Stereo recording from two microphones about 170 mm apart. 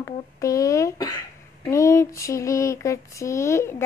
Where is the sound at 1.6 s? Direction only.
15° left (ahead or behind).